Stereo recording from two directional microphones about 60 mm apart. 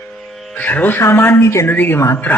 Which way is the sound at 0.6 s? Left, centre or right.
Left.